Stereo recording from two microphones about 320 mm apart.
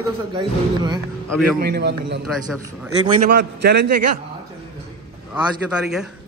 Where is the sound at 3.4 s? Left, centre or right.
Right.